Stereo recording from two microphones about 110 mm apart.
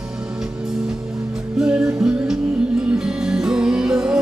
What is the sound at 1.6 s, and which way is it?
Music, 5° right (ahead or behind).